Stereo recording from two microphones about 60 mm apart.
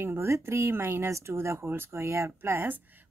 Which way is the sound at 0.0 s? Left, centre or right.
Right.